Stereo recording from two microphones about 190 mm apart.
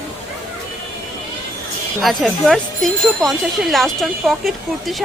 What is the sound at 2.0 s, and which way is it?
Speech, centre (ahead or behind).